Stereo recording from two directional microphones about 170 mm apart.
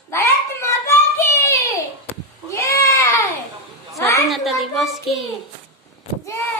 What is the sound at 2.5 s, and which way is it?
Goat, 20° left (ahead or behind).